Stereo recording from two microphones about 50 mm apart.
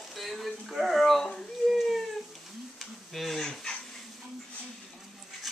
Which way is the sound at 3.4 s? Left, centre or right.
Centre.